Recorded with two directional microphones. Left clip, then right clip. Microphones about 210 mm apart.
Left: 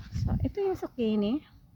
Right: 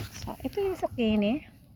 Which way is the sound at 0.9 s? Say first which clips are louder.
Right 2 dB; 60° left (ahead or behind).